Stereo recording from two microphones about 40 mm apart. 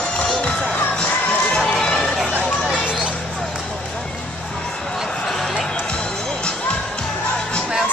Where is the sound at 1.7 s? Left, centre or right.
Centre.